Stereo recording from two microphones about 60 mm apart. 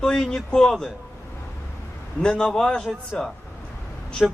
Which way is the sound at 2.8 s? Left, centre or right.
Centre.